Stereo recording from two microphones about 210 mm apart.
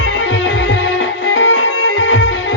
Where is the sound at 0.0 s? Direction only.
70° left (ahead or behind).